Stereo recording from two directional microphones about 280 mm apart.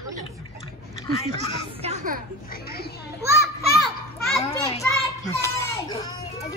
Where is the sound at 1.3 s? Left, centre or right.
Right.